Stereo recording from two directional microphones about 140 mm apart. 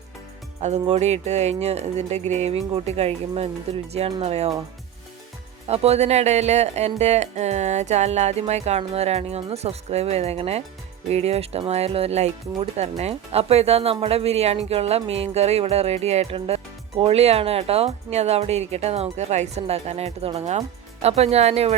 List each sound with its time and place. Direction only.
0.6 s speech: 50° right (ahead or behind)
5.6 s speech: 50° right (ahead or behind)